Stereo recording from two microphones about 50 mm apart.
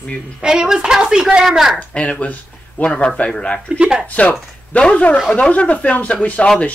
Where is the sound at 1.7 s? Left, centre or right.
Left.